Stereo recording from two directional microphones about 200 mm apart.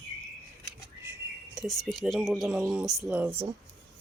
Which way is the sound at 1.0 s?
10° right (ahead or behind).